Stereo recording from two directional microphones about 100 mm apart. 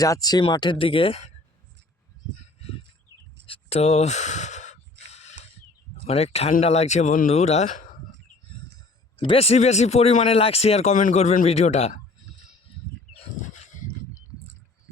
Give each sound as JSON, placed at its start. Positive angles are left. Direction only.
{"t": 0.0, "sound": "speech", "side_deg": 40}
{"t": 0.5, "sound": "speech", "side_deg": 50}
{"t": 3.4, "sound": "a sound", "side_deg": 80}
{"t": 4.9, "sound": "snort", "side_deg": 90}
{"t": 6.1, "sound": "speech", "side_deg": 90}
{"t": 9.1, "sound": "speech", "side_deg": 65}